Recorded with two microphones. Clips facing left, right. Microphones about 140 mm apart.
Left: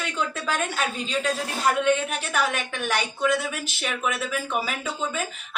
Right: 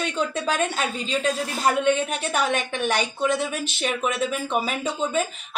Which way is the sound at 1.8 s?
25° right (ahead or behind).